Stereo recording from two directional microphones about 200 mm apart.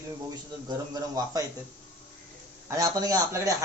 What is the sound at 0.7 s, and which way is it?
Speech, 20° right (ahead or behind).